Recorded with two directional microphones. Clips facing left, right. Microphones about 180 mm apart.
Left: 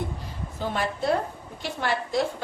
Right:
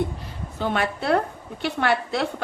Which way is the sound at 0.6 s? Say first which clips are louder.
Right 3 dB; 70° right (ahead or behind).